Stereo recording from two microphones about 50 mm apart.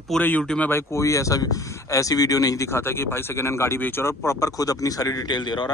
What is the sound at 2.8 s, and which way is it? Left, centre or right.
Speech, left.